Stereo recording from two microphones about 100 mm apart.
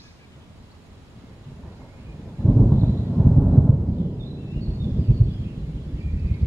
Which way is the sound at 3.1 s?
Centre (ahead or behind).